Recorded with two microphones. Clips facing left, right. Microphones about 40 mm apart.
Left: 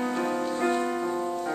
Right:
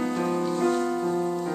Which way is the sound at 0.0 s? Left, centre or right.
Centre.